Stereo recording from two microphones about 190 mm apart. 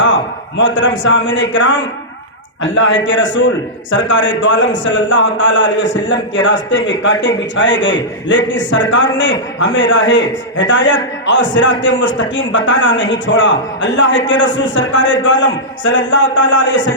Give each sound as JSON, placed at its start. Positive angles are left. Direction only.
{"t": 0.5, "sound": "a man's voice", "side_deg": 75}